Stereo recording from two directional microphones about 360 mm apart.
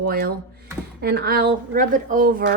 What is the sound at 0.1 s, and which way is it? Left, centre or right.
Speech, right.